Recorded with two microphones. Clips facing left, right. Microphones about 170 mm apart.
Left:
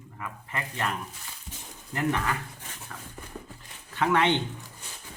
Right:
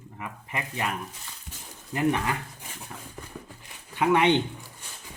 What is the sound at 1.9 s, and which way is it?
Speech, 20° right (ahead or behind).